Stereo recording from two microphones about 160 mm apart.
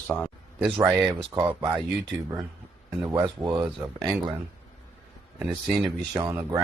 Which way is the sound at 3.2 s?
25° right (ahead or behind).